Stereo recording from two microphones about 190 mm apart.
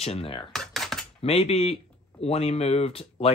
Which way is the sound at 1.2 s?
30° left (ahead or behind).